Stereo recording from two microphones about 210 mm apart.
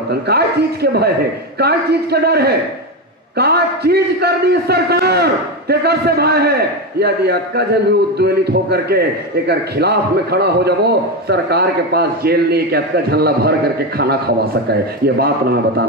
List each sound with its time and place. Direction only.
0.1 s a man's voice: 50° right (ahead or behind)